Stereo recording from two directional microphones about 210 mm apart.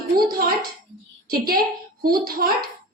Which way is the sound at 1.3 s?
45° right (ahead or behind).